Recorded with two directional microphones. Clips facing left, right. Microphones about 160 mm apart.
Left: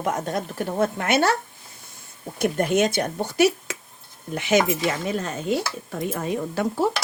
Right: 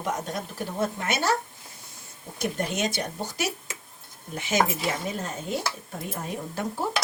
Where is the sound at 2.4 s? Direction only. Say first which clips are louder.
Left 7 dB; 55° left (ahead or behind).